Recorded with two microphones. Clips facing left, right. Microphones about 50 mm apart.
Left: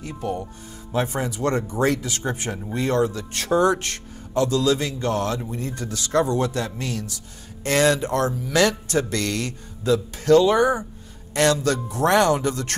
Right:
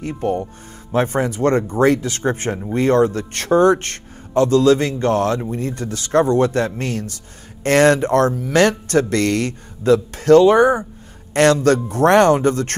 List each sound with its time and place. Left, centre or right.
0.0 s a man's voice: right